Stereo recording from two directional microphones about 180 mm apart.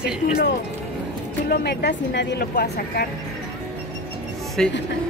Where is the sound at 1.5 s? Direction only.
60° left (ahead or behind).